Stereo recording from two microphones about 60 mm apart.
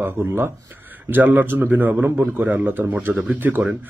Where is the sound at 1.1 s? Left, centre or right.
Right.